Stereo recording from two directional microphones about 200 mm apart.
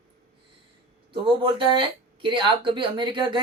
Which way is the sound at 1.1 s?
25° right (ahead or behind).